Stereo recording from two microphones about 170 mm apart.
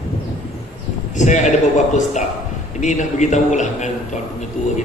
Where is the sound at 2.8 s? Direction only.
45° left (ahead or behind).